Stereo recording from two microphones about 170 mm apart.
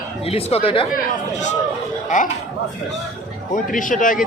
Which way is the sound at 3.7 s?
50° left (ahead or behind).